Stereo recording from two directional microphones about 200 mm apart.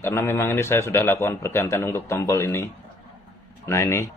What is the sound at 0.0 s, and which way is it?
Speech, 10° left (ahead or behind).